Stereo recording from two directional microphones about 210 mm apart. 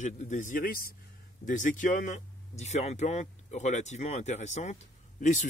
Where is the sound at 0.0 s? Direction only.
35° left (ahead or behind).